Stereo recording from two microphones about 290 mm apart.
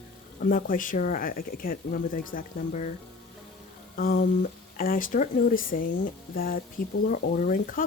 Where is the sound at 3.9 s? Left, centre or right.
Left.